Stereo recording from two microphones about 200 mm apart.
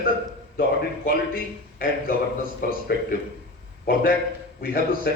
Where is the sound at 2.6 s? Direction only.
50° left (ahead or behind).